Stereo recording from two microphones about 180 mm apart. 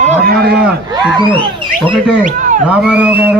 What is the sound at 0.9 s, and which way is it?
Speech, 25° right (ahead or behind).